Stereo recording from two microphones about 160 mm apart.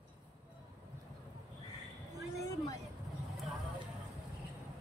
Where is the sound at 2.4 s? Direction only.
20° left (ahead or behind).